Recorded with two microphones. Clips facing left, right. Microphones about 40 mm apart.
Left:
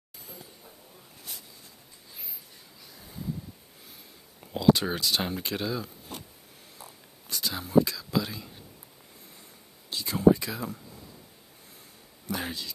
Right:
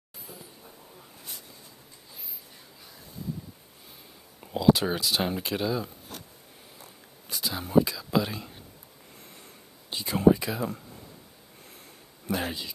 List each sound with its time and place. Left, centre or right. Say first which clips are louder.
4.6 s speech: right 1 dB; centre
7.2 s a sound: even; centre
7.7 s speech: even; centre
8.1 s speech: right 3 dB; right
9.9 s a sound: even; right
10.3 s speech: right 1 dB; centre
12.3 s speech: right 3 dB; centre